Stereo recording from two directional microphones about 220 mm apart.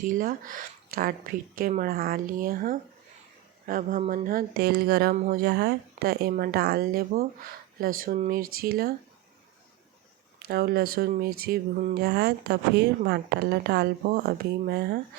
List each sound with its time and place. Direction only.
0.0 s speech: 40° right (ahead or behind)
10.5 s speech: 45° right (ahead or behind)